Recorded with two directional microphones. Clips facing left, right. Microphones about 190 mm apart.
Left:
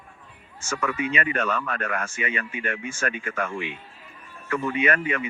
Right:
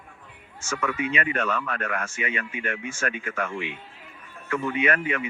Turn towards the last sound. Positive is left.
turn(degrees=35)  # may be behind; listen again after turning